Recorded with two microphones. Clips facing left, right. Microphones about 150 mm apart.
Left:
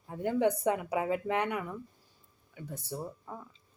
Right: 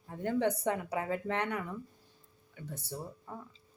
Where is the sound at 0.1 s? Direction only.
15° left (ahead or behind).